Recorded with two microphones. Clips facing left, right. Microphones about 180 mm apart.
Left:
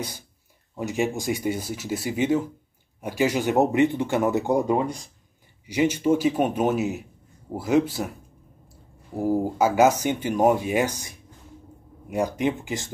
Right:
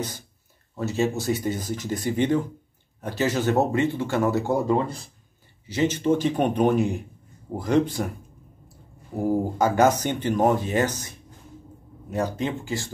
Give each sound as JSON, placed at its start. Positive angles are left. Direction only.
{"t": 0.7, "sound": "speech", "side_deg": 15}
{"t": 9.1, "sound": "speech", "side_deg": 5}
{"t": 12.4, "sound": "speech", "side_deg": 15}